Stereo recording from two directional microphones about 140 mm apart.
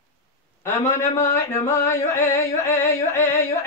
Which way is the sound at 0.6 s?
15° left (ahead or behind).